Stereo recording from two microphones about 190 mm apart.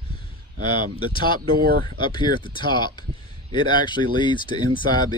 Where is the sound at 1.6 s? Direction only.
50° right (ahead or behind).